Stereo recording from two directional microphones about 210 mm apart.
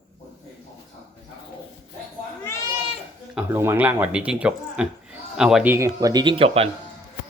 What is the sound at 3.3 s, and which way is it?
Speech, 10° right (ahead or behind).